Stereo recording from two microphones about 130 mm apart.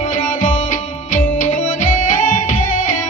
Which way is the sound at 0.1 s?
90° left.